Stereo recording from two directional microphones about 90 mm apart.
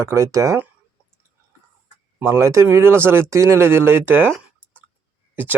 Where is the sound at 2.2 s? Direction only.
30° right (ahead or behind).